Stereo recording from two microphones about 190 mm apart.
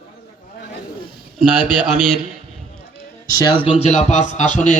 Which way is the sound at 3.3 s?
20° left (ahead or behind).